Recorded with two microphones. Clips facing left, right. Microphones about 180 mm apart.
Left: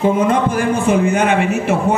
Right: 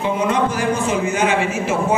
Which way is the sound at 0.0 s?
50° left (ahead or behind).